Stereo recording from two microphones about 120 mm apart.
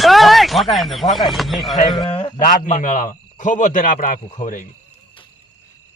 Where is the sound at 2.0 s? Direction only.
50° left (ahead or behind).